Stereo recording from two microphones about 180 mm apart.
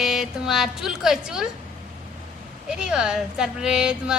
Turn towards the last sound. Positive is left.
turn(degrees=-5)  # may be behind; listen again after turning